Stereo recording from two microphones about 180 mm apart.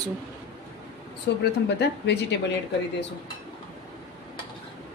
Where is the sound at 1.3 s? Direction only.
70° left (ahead or behind).